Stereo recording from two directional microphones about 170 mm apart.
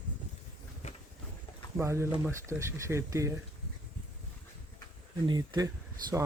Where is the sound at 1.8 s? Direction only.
15° right (ahead or behind).